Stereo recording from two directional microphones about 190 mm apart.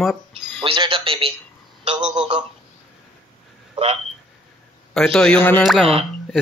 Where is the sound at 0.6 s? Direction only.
30° right (ahead or behind).